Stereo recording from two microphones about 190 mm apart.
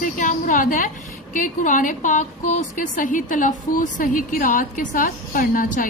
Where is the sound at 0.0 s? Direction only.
45° left (ahead or behind).